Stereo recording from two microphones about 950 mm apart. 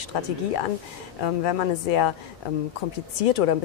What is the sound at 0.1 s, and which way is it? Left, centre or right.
A woman's voice, left.